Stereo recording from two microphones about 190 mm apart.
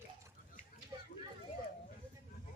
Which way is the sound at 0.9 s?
25° right (ahead or behind).